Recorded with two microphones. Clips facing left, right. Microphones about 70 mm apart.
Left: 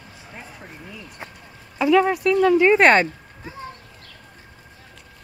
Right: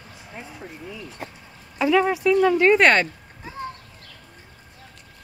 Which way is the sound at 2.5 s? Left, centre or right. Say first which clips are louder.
Left 2 dB; centre.